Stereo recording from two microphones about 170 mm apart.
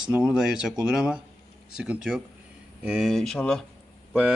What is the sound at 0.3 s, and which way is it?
Speech, 5° right (ahead or behind).